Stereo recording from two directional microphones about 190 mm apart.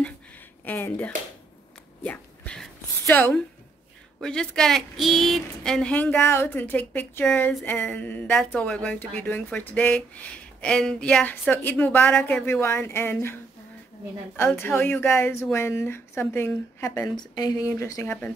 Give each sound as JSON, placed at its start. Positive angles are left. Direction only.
{"t": 0.7, "sound": "a woman's voice", "side_deg": 10}
{"t": 2.0, "sound": "a sound", "side_deg": 5}
{"t": 4.2, "sound": "a woman's voice", "side_deg": 5}
{"t": 14.6, "sound": "a woman's voice", "side_deg": 10}